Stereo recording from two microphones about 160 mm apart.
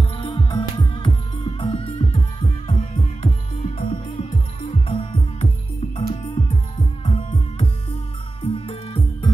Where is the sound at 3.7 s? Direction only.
40° left (ahead or behind).